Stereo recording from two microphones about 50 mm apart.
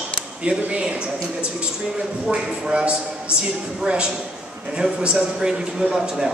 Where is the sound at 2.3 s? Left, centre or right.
Right.